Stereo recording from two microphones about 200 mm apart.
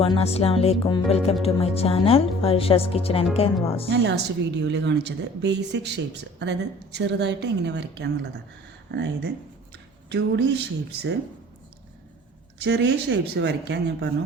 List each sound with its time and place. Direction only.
0.0 s speech: 30° left (ahead or behind)
3.8 s a woman's voice: 60° right (ahead or behind)
12.5 s a woman's voice: 60° right (ahead or behind)